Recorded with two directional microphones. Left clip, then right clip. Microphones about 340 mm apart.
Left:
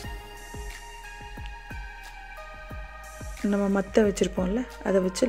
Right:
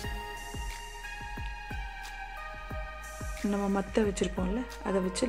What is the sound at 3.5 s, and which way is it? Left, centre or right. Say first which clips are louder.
Speech: left 6 dB; centre.